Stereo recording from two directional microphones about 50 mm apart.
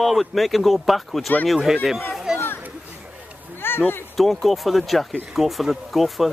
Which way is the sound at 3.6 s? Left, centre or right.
Left.